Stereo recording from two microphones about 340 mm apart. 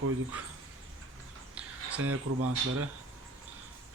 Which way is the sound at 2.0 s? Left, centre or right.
Right.